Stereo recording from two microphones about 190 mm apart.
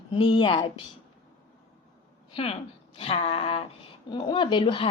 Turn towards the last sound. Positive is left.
turn(degrees=25)  # may be behind; listen again after turning